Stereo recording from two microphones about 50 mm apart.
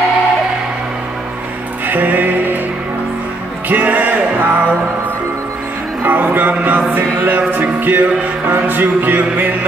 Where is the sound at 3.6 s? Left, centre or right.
Right.